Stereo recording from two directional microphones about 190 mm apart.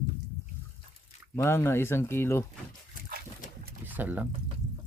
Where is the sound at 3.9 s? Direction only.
10° right (ahead or behind).